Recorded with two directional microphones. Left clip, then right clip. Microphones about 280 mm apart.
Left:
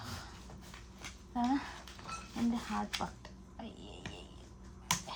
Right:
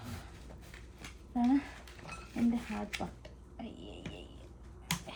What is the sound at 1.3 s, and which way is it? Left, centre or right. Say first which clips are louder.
Speech: right 3 dB; centre.